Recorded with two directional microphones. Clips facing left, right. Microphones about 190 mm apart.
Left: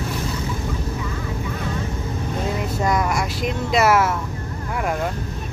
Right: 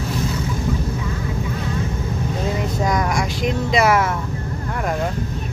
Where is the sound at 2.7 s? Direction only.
5° left (ahead or behind).